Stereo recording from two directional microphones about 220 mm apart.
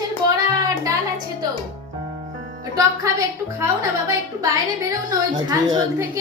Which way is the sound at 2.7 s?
15° right (ahead or behind).